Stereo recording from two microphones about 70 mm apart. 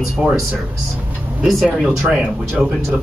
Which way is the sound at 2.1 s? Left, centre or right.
Centre.